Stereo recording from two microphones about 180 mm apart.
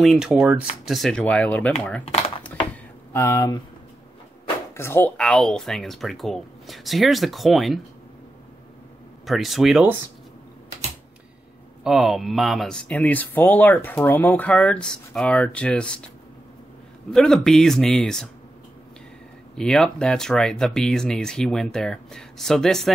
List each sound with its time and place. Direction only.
0.0 s speech: centre (ahead or behind)
2.0 s a sound: 35° left (ahead or behind)
3.1 s speech: 15° left (ahead or behind)
4.7 s speech: 15° left (ahead or behind)
9.2 s speech: centre (ahead or behind)
11.8 s speech: centre (ahead or behind)
17.1 s speech: 5° left (ahead or behind)
19.5 s speech: 5° left (ahead or behind)